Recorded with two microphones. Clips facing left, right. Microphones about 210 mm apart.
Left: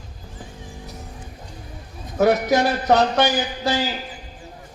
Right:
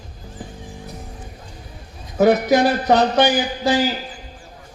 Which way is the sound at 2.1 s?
15° right (ahead or behind).